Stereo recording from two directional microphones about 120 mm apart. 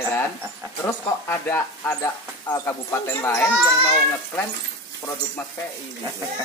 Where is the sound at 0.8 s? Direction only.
20° left (ahead or behind).